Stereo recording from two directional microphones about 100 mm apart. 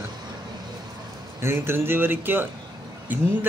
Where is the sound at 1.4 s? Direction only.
25° right (ahead or behind).